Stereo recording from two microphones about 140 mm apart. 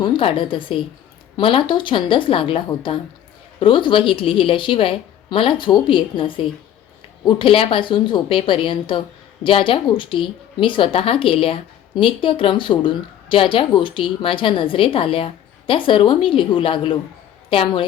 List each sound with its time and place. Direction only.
0.0 s a woman's voice: 40° left (ahead or behind)